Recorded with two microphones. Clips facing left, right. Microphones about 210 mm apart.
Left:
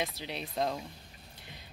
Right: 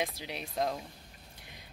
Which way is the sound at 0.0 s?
10° right (ahead or behind).